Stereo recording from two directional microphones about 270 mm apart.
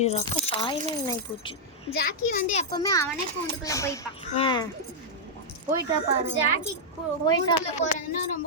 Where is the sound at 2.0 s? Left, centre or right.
Left.